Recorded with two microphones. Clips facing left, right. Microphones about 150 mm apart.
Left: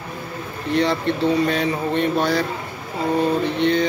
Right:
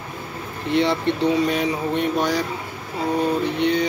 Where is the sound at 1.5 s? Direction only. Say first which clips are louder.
Left 1 dB; 10° right (ahead or behind).